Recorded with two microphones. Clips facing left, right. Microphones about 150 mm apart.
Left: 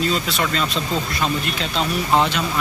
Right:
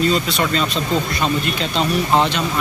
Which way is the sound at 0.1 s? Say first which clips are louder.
Right 3 dB; centre (ahead or behind).